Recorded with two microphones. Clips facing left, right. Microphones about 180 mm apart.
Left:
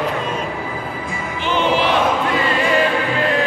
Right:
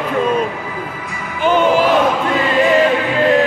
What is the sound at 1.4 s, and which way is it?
Music, 45° right (ahead or behind).